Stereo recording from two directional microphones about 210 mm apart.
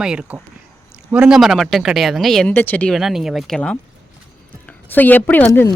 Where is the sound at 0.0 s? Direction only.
5° right (ahead or behind).